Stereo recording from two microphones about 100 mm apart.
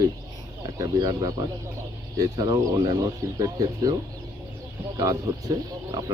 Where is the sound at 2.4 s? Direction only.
45° right (ahead or behind).